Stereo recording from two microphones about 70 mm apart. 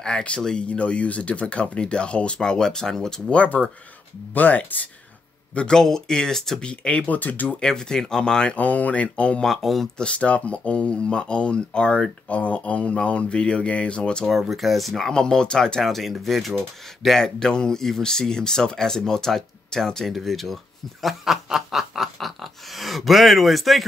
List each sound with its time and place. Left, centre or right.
0.0 s speech: centre
5.5 s speech: centre
7.6 s speech: centre
9.4 s speech: centre
10.0 s speech: centre
14.3 s speech: centre
21.0 s snicker: centre